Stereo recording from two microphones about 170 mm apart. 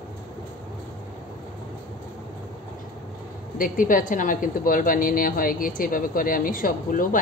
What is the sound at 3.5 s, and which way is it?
A woman's voice, 55° left (ahead or behind).